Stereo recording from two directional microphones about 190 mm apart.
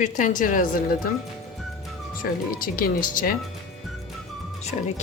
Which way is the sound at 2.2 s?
50° left (ahead or behind).